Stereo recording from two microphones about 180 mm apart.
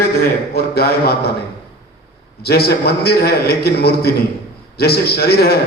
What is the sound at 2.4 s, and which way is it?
A man's voice, 60° left (ahead or behind).